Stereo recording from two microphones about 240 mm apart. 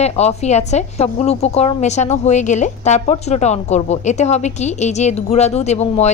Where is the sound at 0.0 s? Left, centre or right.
Left.